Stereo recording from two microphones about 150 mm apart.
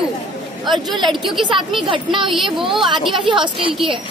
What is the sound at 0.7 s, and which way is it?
Speech, centre (ahead or behind).